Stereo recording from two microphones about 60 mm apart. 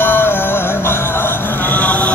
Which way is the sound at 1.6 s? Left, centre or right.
Left.